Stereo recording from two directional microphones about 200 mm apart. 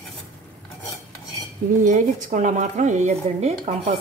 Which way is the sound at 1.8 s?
40° right (ahead or behind).